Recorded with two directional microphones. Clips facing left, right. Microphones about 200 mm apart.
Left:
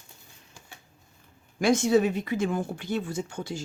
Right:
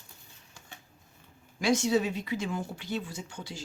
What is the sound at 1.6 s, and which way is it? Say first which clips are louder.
Speech: left 4 dB; 50° left (ahead or behind).